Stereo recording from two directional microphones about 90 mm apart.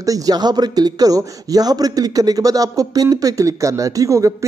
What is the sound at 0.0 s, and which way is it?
A man's voice, 45° right (ahead or behind).